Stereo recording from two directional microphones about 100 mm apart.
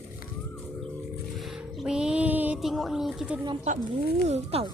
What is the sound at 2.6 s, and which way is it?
Speech, centre (ahead or behind).